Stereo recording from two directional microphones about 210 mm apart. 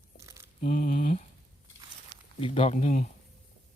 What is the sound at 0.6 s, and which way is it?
Speech, 40° left (ahead or behind).